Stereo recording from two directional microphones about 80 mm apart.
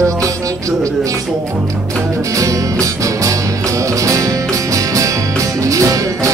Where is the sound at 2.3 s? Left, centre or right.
Right.